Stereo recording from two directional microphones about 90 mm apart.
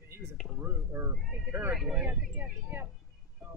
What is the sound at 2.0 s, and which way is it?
Speech, 20° right (ahead or behind).